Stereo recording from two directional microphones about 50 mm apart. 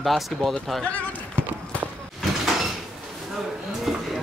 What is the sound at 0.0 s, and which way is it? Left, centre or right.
Speech, centre.